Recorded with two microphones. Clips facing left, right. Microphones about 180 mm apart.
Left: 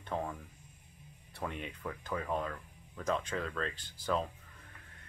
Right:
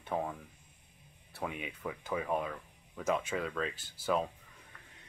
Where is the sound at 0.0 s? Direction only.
10° right (ahead or behind).